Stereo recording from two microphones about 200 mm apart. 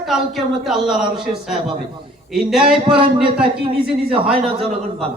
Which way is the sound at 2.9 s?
25° right (ahead or behind).